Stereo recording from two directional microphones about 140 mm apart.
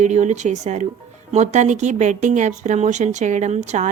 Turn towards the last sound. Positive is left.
turn(degrees=-55)  # may be behind; listen again after turning